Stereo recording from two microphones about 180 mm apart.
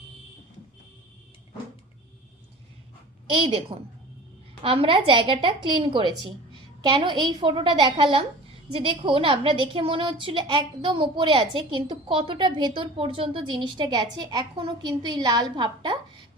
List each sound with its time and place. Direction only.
3.3 s a woman's voice: 30° right (ahead or behind)